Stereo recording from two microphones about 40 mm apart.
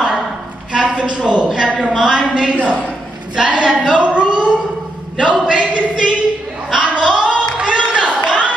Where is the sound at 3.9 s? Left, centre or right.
Right.